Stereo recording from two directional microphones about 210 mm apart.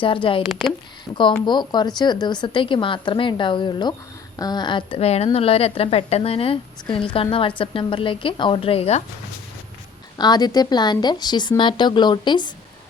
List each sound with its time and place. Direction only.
0.0 s speech: 25° left (ahead or behind)
1.5 s speech: 20° left (ahead or behind)
10.2 s speech: 20° left (ahead or behind)